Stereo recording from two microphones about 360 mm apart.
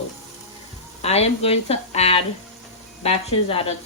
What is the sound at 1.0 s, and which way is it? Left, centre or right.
Speech, centre.